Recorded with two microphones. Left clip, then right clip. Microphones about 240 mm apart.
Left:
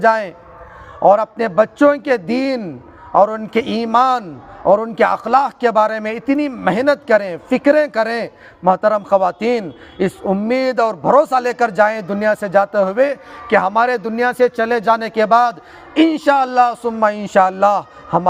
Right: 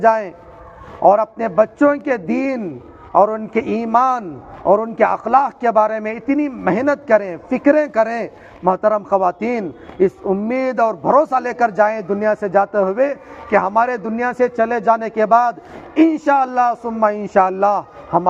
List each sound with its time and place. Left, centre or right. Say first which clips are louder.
0.0 s a man's voice: even; left